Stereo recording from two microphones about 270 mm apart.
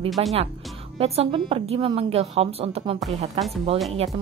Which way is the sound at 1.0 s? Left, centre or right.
Right.